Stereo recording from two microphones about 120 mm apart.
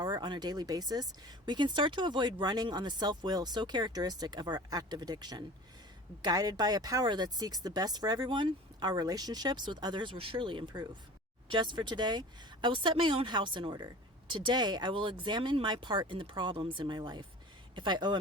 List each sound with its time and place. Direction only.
0.0 s speech: 40° right (ahead or behind)